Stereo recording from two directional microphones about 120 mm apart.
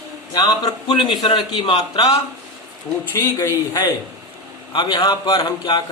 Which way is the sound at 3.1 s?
20° left (ahead or behind).